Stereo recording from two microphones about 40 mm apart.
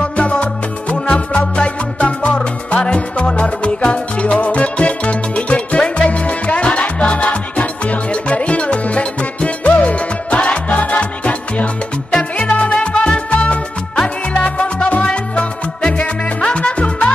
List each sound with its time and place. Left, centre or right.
0.0 s music: left